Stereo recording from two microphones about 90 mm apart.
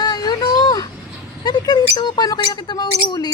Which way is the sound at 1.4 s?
50° left (ahead or behind).